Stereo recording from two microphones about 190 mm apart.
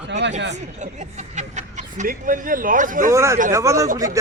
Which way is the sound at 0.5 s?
40° right (ahead or behind).